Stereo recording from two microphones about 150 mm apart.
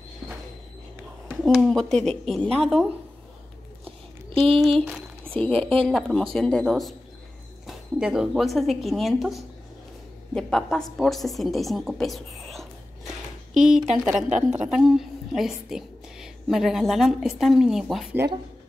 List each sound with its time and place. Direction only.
1.4 s a woman's voice: centre (ahead or behind)
4.3 s a sound: 40° right (ahead or behind)
4.6 s a woman's voice: centre (ahead or behind)
5.9 s a woman's voice: 5° left (ahead or behind)
11.0 s whispering: centre (ahead or behind)
13.9 s a woman's voice: centre (ahead or behind)